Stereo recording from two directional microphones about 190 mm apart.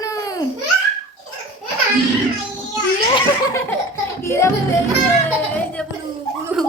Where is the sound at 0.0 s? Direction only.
20° left (ahead or behind).